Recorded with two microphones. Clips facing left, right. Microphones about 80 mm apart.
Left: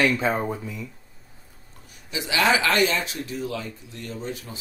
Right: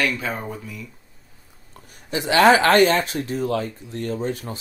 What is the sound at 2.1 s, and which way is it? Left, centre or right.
Speech, right.